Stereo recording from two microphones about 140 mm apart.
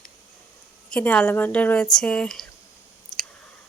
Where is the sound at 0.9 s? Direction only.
10° left (ahead or behind).